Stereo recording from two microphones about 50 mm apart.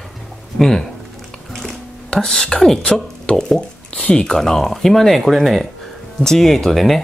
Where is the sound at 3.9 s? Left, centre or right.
Centre.